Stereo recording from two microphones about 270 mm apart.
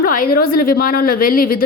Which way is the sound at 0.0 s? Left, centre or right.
Left.